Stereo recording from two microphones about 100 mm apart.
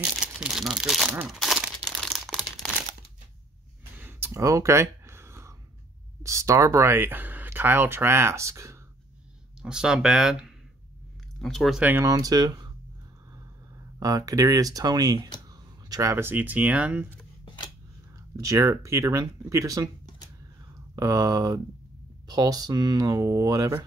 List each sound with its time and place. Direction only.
0.2 s crumpling: 5° right (ahead or behind)
3.9 s a sound: 20° right (ahead or behind)
6.2 s speech: 30° right (ahead or behind)
9.6 s speech: 5° right (ahead or behind)
12.0 s speech: 35° right (ahead or behind)
13.9 s speech: 35° right (ahead or behind); by 17.1 s 15° right (ahead or behind)
18.3 s speech: 30° right (ahead or behind)
20.9 s speech: 35° right (ahead or behind)